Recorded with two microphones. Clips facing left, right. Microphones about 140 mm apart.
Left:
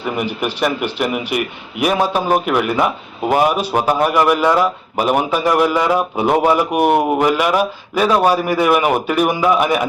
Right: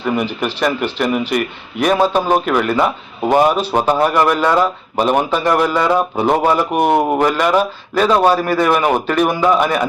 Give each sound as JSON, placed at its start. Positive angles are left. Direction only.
{"t": 0.0, "sound": "a man's voice", "side_deg": 10}